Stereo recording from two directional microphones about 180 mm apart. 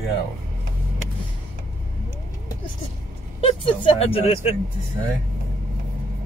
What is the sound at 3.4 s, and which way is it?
Speech, 30° left (ahead or behind).